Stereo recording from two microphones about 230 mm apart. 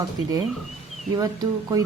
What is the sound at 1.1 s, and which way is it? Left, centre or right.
Speech, centre.